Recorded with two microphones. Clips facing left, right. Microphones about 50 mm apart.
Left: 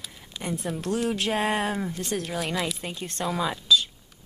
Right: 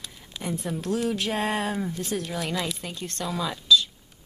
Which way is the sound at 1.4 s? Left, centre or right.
Centre.